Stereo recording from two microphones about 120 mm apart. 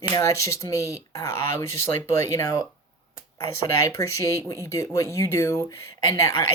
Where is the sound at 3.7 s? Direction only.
25° left (ahead or behind).